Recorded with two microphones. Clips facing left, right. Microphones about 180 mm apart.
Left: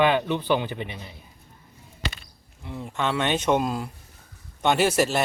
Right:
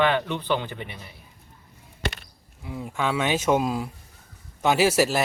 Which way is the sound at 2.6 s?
5° right (ahead or behind).